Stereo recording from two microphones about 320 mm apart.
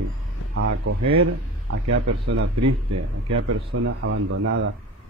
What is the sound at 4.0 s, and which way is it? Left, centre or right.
Speech, right.